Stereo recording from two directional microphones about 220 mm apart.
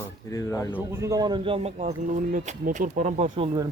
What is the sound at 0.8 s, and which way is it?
A man's voice, 10° right (ahead or behind).